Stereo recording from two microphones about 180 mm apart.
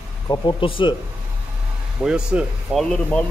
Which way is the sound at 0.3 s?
25° left (ahead or behind).